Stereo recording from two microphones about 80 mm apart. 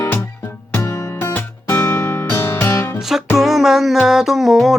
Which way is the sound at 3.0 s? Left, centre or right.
Centre.